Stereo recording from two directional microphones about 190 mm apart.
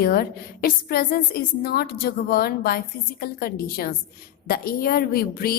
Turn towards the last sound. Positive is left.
turn(degrees=50)  # may be behind; listen again after turning